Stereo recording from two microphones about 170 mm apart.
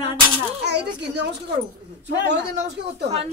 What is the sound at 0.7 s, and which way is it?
Speech, 85° right.